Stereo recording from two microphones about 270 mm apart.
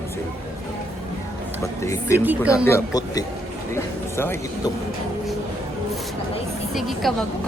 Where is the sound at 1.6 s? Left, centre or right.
Centre.